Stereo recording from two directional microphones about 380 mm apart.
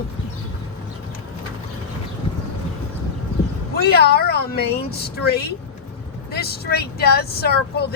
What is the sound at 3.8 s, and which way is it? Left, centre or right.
Speech, left.